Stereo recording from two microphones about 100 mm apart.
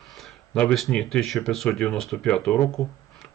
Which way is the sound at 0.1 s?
Centre (ahead or behind).